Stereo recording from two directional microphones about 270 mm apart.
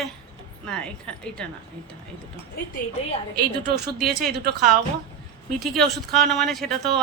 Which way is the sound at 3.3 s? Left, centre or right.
Right.